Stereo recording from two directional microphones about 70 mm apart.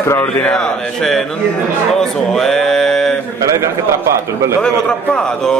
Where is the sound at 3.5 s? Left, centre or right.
Right.